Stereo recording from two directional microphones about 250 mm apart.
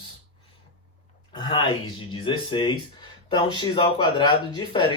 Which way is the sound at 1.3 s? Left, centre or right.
Centre.